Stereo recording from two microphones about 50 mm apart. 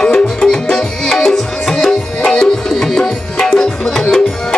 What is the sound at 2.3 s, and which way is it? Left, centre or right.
Tabla, centre.